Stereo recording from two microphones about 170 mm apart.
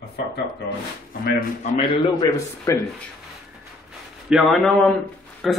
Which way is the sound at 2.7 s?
15° left (ahead or behind).